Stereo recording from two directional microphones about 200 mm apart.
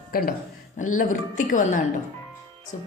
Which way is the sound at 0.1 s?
50° left (ahead or behind).